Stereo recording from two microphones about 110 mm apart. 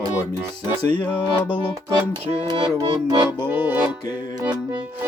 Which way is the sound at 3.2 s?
15° right (ahead or behind).